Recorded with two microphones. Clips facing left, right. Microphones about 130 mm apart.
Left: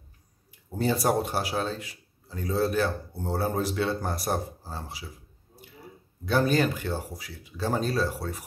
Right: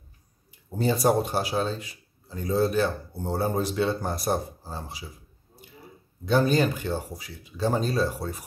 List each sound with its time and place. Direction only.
0.7 s speech: centre (ahead or behind)
6.2 s speech: 5° left (ahead or behind)
7.5 s speech: 20° right (ahead or behind)